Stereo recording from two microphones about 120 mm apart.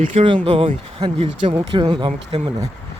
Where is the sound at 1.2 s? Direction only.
45° right (ahead or behind).